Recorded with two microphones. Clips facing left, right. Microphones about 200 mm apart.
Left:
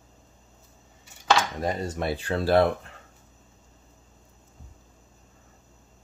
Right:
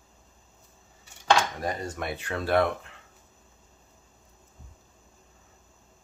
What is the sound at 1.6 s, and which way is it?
Speech, 25° left (ahead or behind).